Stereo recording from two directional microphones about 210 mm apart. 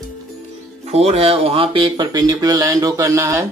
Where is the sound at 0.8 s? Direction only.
30° right (ahead or behind).